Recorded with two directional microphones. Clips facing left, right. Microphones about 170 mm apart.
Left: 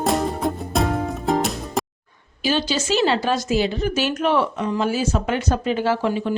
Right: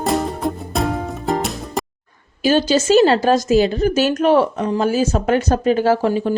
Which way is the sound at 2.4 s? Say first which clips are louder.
Right 7 dB; 45° right (ahead or behind).